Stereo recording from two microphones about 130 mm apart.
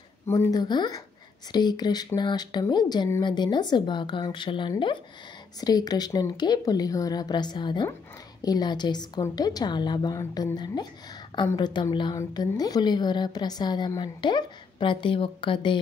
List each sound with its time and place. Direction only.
0.3 s a woman's voice: 25° left (ahead or behind); by 15.8 s 40° left (ahead or behind)